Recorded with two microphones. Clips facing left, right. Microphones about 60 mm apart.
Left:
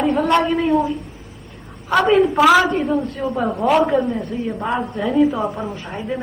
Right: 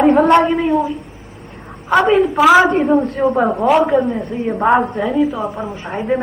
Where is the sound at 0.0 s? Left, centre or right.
Right.